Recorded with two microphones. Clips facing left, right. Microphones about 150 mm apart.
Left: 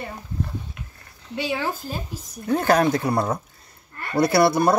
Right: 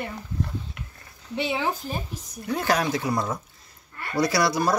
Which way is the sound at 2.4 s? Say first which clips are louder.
Left 6 dB; 45° left (ahead or behind).